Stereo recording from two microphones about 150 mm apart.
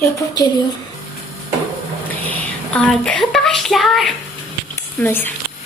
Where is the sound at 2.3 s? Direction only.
5° left (ahead or behind).